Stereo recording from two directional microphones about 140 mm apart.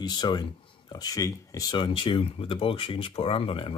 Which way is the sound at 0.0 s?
30° left (ahead or behind).